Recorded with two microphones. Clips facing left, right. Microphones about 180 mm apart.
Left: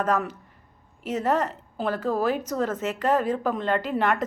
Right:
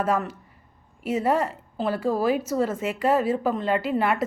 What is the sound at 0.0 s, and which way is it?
A woman's voice, 10° right (ahead or behind).